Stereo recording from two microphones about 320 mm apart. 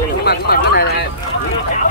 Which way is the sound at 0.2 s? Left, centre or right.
Left.